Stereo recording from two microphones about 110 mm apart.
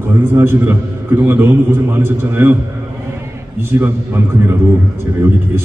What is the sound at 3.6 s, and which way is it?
A man's voice, 20° right (ahead or behind).